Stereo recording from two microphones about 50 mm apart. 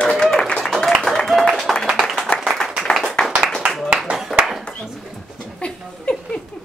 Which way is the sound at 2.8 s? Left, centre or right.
Centre.